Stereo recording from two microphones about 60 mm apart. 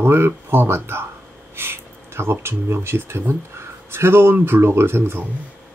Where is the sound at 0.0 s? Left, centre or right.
Right.